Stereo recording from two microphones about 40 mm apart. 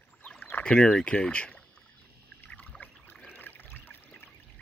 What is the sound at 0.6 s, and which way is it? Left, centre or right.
Speech, left.